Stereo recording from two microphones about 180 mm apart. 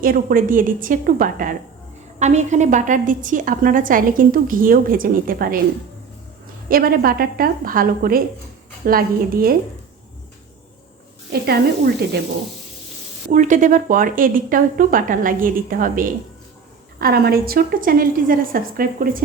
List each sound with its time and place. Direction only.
0.0 s a woman's voice: 55° right (ahead or behind)
6.7 s a woman's voice: 55° right (ahead or behind)
11.3 s a woman's voice: 60° right (ahead or behind)
13.3 s a woman's voice: 45° right (ahead or behind)